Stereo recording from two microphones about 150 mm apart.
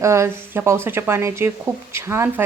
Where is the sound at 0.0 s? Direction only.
20° right (ahead or behind).